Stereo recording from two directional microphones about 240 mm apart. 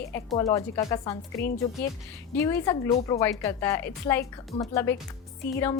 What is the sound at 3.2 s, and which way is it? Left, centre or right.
A woman's voice, centre.